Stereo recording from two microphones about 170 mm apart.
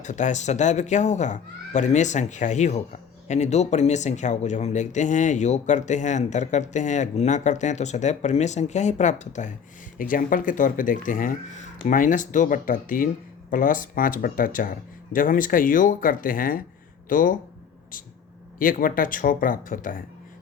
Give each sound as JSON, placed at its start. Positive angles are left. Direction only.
{"t": 0.0, "sound": "speech", "side_deg": 45}
{"t": 18.6, "sound": "speech", "side_deg": 55}